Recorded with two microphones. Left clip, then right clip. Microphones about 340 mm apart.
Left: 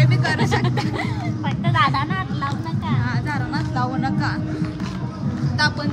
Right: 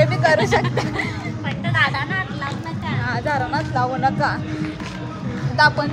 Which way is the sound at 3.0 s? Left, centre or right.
Centre.